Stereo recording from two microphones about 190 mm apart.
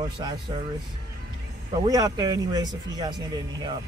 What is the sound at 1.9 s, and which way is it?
Speech, 20° right (ahead or behind).